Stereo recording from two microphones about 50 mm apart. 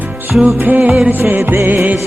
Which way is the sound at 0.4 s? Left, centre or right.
Right.